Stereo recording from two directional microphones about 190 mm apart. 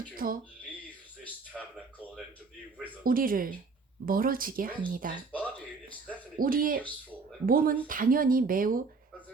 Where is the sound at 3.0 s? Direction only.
50° right (ahead or behind).